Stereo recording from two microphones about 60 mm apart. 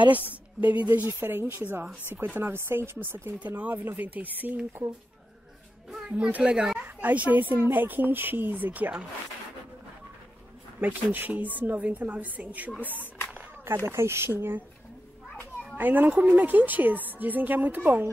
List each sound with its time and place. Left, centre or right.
0.1 s a woman's voice: right
3.3 s a woman's voice: right
6.0 s speech: right
6.8 s a woman's voice: right
10.8 s a woman's voice: right
13.8 s speech: right
15.8 s a woman's voice: right